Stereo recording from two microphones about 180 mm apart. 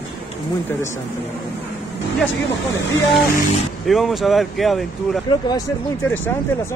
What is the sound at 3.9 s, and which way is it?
Speech, centre (ahead or behind).